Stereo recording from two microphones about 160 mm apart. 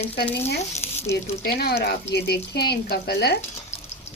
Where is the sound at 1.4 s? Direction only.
75° left (ahead or behind).